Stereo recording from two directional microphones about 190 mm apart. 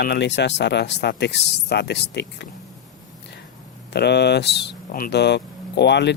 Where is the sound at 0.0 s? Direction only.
60° left (ahead or behind).